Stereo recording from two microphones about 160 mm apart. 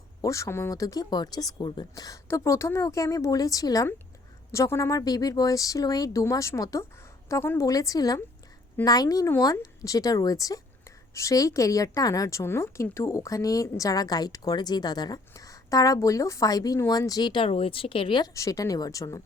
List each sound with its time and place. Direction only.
0.2 s speech: 20° left (ahead or behind)